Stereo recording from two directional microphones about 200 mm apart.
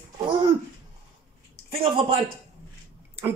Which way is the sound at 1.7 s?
30° right (ahead or behind).